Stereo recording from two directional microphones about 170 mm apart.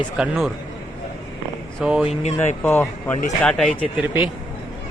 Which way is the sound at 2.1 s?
40° left (ahead or behind).